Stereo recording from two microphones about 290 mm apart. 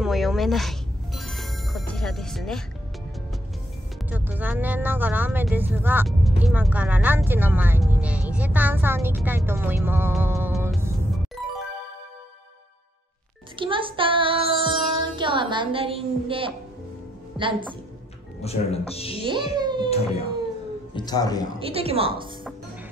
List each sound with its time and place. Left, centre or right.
0.0 s music: centre
4.1 s speech: centre
11.4 s music: centre
13.6 s music: centre
17.4 s a woman's voice: centre
18.4 s speech: left
19.2 s speech: centre
20.9 s a man's voice: centre
21.5 s a woman's voice: centre